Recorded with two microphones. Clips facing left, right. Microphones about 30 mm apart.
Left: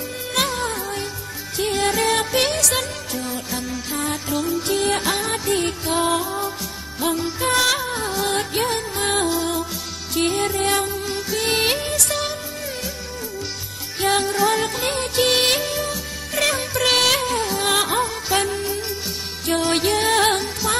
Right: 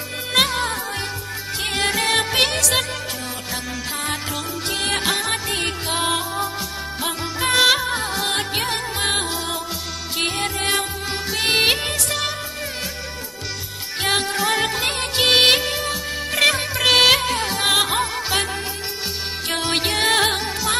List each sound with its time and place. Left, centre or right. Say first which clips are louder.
0.3 s music: right 3 dB; right
4.7 s music: right 2 dB; right
7.4 s music: right 4 dB; right
11.5 s music: right 4 dB; right
14.0 s music: left 2 dB; right
16.7 s music: even; centre
17.0 s music: right 4 dB; right
17.4 s music: even; right
17.6 s music: right 2 dB; right
20.2 s music: left 1 dB; centre